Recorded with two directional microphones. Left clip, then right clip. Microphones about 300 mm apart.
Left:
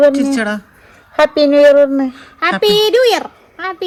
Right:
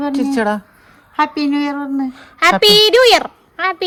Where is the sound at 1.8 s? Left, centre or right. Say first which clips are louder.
Left 11 dB; centre.